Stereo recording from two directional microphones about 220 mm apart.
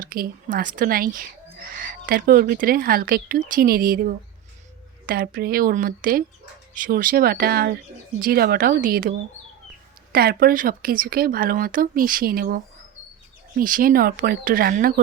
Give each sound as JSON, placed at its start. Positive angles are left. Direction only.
{"t": 0.0, "sound": "speech", "side_deg": -40}
{"t": 5.0, "sound": "speech", "side_deg": -45}